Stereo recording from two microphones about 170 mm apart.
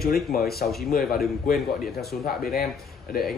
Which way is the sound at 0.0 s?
65° left (ahead or behind).